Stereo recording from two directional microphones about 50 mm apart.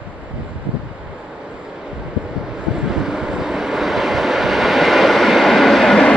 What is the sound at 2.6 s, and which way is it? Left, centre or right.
Vehicle, centre.